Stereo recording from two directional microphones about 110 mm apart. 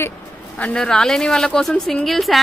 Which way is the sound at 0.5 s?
10° left (ahead or behind).